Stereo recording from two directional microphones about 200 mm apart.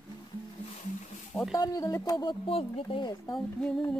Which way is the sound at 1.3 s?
Centre (ahead or behind).